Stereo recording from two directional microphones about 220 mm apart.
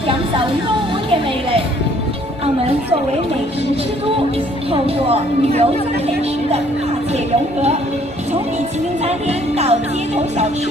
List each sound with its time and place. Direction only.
4.7 s speech: 25° right (ahead or behind)
9.0 s speech: 30° right (ahead or behind)